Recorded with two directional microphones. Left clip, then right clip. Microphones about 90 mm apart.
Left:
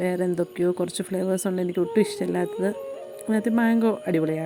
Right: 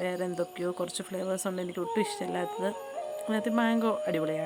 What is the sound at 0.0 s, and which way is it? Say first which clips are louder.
Speech: left 6 dB; 35° left (ahead or behind).